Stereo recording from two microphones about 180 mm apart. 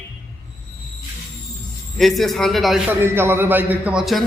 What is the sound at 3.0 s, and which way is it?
A man's voice, 10° right (ahead or behind).